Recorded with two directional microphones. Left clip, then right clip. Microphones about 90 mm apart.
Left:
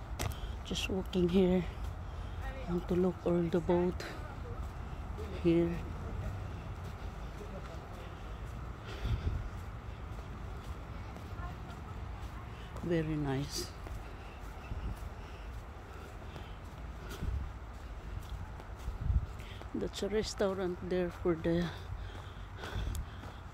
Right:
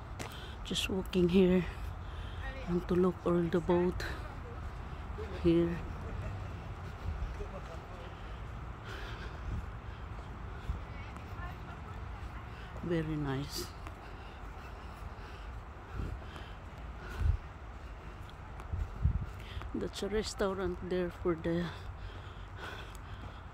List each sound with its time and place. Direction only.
0.7 s speech: 45° right (ahead or behind)
2.9 s speech: 35° right (ahead or behind)
5.3 s speech: 25° right (ahead or behind)
8.9 s vehicle: 20° right (ahead or behind)
12.9 s speech: centre (ahead or behind)
19.8 s speech: 10° right (ahead or behind)